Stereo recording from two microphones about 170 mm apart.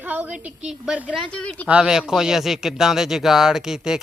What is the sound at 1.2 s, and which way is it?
Speech, 5° left (ahead or behind).